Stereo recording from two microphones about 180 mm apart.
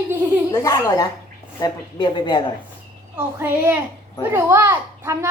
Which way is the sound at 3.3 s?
10° right (ahead or behind).